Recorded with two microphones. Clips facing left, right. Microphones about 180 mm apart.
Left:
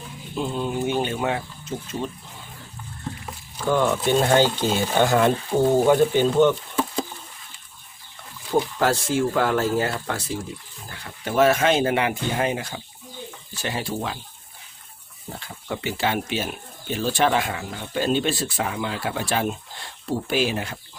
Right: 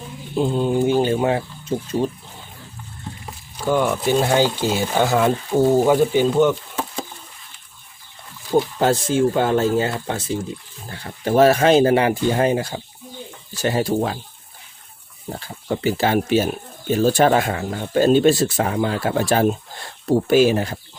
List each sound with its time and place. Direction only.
0.3 s speech: 30° right (ahead or behind)
3.7 s speech: 10° right (ahead or behind)
8.8 s speech: 20° right (ahead or behind)
10.8 s speech: 35° right (ahead or behind)
15.3 s speech: 35° right (ahead or behind)